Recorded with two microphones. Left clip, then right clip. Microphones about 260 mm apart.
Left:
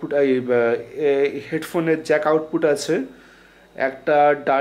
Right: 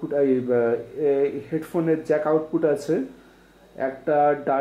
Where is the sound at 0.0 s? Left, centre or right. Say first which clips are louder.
Left 3 dB; centre.